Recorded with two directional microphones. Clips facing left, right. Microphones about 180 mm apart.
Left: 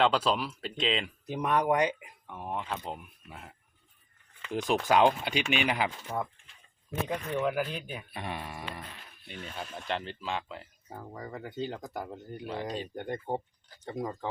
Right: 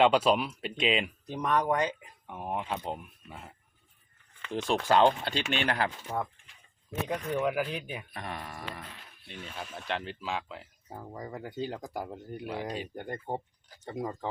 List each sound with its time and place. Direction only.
0.0 s speech: 10° right (ahead or behind)
1.3 s speech: 10° left (ahead or behind)
2.2 s speech: 10° right (ahead or behind); by 6.2 s 5° left (ahead or behind)
7.3 s speech: 10° right (ahead or behind)
9.2 s speech: centre (ahead or behind)